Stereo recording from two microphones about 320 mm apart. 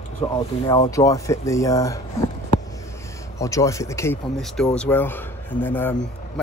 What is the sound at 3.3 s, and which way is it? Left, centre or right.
Speech, centre.